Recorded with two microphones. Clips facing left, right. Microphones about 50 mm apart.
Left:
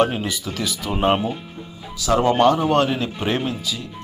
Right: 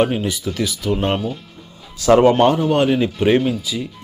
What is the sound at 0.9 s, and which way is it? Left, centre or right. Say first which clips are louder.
Speech: left 1 dB; centre.